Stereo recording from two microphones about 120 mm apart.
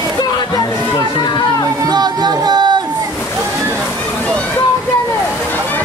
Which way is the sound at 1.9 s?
35° right (ahead or behind).